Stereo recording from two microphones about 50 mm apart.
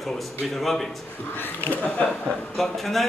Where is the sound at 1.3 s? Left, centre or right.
Left.